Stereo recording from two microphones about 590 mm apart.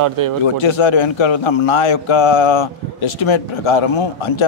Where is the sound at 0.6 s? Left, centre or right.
Left.